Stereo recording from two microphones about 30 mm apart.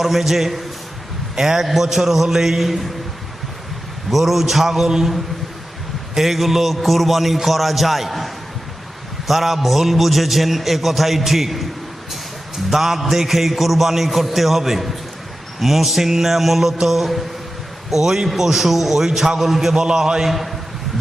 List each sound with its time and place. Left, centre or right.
0.0 s a man's voice: centre
4.1 s a man's voice: centre
6.1 s a man's voice: centre
12.7 s a man's voice: centre
17.9 s a man's voice: centre
20.2 s a man's voice: centre